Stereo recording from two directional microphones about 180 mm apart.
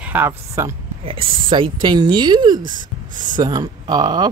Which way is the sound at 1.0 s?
30° right (ahead or behind).